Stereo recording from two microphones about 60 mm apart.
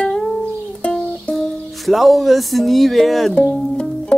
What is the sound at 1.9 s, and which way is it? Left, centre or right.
Speech, centre.